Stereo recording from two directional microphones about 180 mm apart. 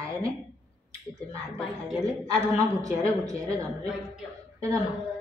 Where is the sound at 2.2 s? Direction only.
20° right (ahead or behind).